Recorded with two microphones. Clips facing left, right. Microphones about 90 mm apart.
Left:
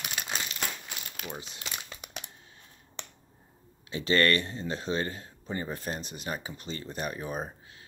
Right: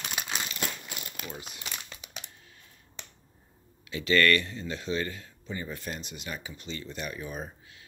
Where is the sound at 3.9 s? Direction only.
35° left (ahead or behind).